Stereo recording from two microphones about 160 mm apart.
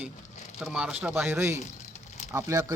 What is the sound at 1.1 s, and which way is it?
Speech, 15° right (ahead or behind).